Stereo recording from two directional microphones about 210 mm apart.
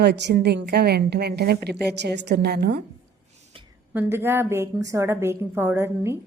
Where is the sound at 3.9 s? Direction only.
10° right (ahead or behind).